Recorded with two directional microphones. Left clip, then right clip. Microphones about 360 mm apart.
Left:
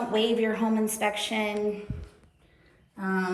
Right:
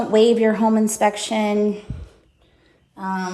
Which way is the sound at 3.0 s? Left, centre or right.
Centre.